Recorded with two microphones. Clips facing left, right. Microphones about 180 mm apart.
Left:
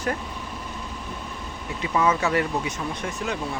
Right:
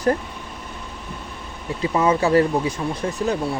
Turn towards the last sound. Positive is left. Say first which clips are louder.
# right 6 dB
turn(degrees=-35)  # may be behind; listen again after turning